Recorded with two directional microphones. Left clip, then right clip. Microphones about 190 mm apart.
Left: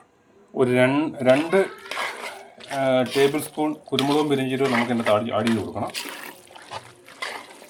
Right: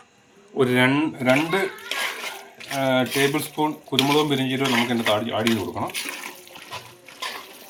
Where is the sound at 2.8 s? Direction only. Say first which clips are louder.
Left 1 dB; 50° left (ahead or behind).